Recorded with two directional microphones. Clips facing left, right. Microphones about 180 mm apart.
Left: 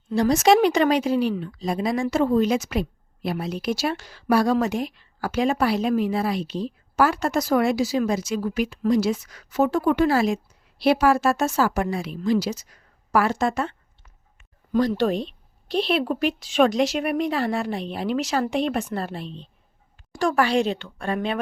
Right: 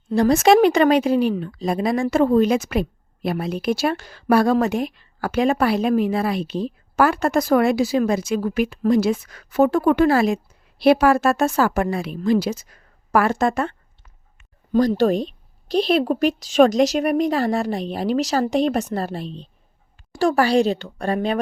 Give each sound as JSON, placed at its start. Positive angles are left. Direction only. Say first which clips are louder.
{"t": 0.1, "sound": "a woman's voice", "louder": "right 3 dB", "side_deg": -55}
{"t": 14.7, "sound": "speech", "louder": "right 4 dB", "side_deg": -40}